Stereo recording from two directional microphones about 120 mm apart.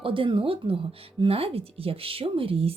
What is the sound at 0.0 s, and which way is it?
Speech, 45° right (ahead or behind).